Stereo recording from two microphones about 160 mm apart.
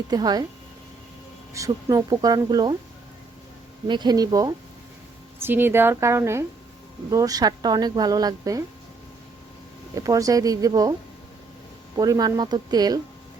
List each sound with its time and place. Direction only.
0.1 s a woman's voice: 25° right (ahead or behind)
1.5 s a woman's voice: 20° right (ahead or behind)
3.8 s a woman's voice: 25° right (ahead or behind)
5.4 s a woman's voice: 15° right (ahead or behind)
9.9 s a woman's voice: 20° right (ahead or behind)
11.9 s a woman's voice: 25° right (ahead or behind)